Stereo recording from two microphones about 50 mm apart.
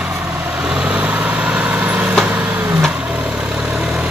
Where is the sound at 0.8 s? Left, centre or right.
Right.